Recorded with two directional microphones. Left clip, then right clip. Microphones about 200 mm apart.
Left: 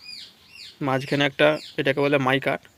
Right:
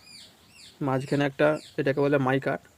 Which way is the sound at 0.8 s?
Centre (ahead or behind).